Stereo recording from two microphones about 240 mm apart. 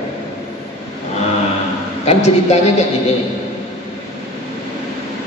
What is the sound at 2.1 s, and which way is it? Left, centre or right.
Speech, left.